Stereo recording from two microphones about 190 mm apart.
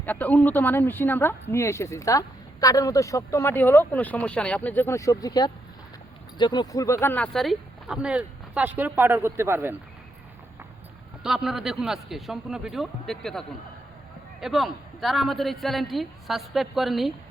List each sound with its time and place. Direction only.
0.0 s speech: 10° left (ahead or behind); by 9.7 s 10° right (ahead or behind)
11.2 s speech: 5° right (ahead or behind)
14.4 s speech: centre (ahead or behind)